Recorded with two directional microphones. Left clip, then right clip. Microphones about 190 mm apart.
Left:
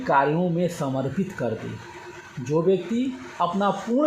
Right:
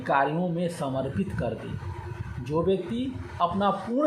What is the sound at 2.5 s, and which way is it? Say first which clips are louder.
Speech: left 4 dB; 50° left (ahead or behind).